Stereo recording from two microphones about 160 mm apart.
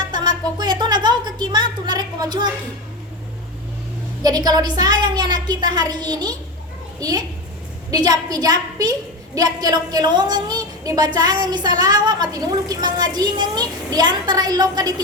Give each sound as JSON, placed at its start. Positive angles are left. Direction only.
{"t": 0.1, "sound": "a woman's voice", "side_deg": -25}
{"t": 4.2, "sound": "a woman's voice", "side_deg": -25}